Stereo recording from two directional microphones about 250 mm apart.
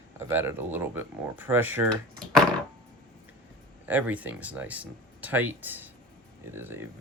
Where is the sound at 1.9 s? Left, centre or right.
Centre.